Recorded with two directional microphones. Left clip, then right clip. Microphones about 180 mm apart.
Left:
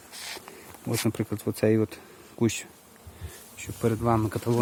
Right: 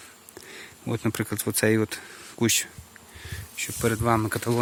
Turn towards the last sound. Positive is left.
turn(degrees=-5)  # may be behind; listen again after turning